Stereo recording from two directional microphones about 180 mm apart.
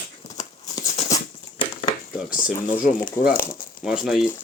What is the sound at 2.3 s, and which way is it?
Speech, 50° left (ahead or behind).